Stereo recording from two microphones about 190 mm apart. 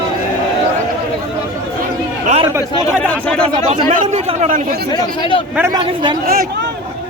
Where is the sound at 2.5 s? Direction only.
15° right (ahead or behind).